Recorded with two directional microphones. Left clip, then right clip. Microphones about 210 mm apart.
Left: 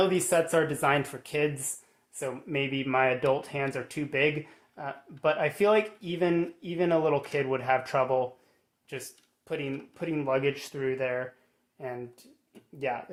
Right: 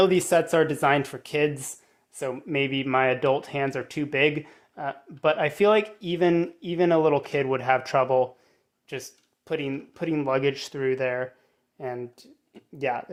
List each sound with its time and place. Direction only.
0.0 s speech: 40° right (ahead or behind)